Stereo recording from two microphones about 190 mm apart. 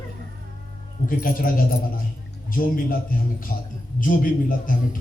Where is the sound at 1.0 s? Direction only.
45° left (ahead or behind).